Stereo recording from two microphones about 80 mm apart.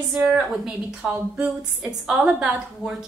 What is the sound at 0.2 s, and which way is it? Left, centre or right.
Speech, centre.